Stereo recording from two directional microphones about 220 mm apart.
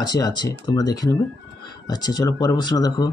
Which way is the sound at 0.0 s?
20° left (ahead or behind).